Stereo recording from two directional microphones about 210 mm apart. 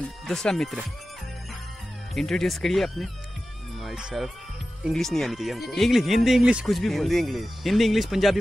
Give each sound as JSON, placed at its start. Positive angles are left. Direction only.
{"t": 0.0, "sound": "speech", "side_deg": 5}
{"t": 2.1, "sound": "speech", "side_deg": 0}